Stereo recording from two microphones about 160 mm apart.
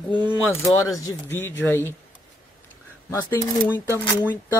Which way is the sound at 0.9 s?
15° left (ahead or behind).